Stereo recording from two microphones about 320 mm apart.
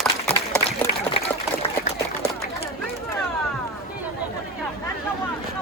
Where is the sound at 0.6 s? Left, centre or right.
Centre.